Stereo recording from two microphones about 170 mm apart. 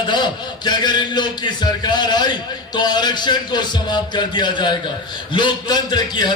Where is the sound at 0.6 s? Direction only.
25° left (ahead or behind).